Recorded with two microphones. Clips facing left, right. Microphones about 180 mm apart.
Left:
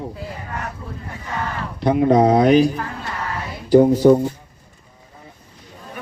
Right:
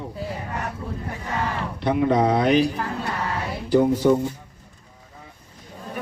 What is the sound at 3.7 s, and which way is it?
Speech, 40° left (ahead or behind).